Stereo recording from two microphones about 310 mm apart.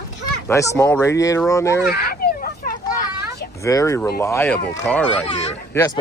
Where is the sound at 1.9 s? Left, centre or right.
Left.